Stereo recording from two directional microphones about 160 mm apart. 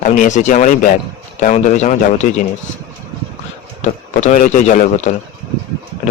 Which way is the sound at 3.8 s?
45° left (ahead or behind).